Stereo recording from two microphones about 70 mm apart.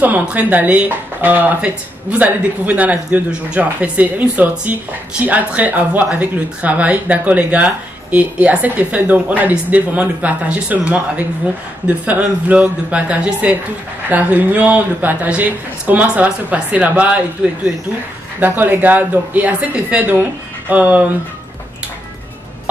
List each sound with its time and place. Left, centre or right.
0.0 s speech: right
12.4 s speech: right
18.4 s speech: right